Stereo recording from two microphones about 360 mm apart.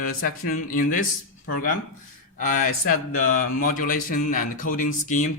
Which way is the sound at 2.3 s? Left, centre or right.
Left.